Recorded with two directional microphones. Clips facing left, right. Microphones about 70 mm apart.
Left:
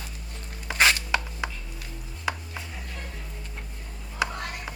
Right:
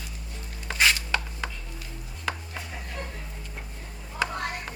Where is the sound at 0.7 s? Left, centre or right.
Centre.